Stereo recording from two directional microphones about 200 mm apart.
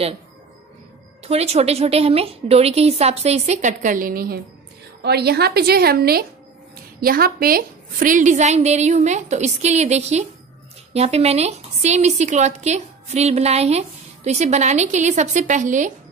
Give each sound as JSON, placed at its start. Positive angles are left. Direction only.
{"t": 1.2, "sound": "a woman's voice", "side_deg": -30}